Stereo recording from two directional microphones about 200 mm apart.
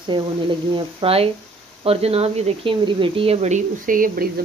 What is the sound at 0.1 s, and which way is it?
Speech, 25° right (ahead or behind).